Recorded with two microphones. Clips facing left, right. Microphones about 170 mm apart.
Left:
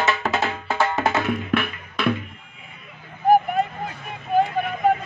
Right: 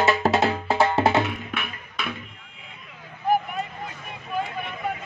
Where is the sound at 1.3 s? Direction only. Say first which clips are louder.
Left 9 dB; 55° left (ahead or behind).